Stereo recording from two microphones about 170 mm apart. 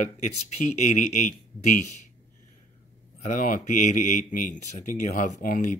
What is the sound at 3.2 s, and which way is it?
Speech, 50° left (ahead or behind).